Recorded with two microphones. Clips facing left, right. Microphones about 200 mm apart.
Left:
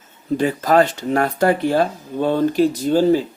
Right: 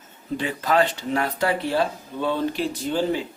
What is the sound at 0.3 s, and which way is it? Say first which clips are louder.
Speech: left 6 dB; 45° left (ahead or behind).